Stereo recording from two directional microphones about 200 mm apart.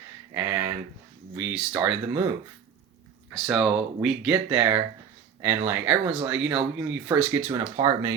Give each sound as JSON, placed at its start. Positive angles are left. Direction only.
{"t": 0.3, "sound": "a sound", "side_deg": -10}
{"t": 1.4, "sound": "speech", "side_deg": -5}
{"t": 3.3, "sound": "speech", "side_deg": 0}
{"t": 7.8, "sound": "speech", "side_deg": -20}